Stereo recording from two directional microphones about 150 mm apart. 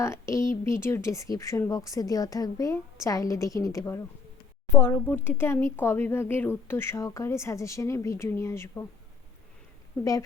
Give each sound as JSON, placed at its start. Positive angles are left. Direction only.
{"t": 0.0, "sound": "speech", "side_deg": 20}
{"t": 10.0, "sound": "speech", "side_deg": 20}